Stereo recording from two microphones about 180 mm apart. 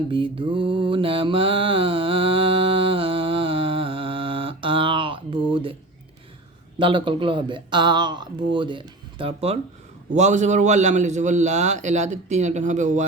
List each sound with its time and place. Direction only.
0.1 s mantra: 30° right (ahead or behind)
6.7 s a man's voice: 25° right (ahead or behind); by 13.1 s 45° right (ahead or behind)